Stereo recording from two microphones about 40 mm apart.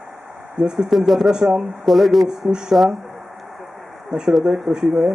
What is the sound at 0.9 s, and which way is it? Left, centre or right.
Speech, centre.